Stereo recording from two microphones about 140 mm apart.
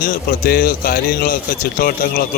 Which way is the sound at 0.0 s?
90° left.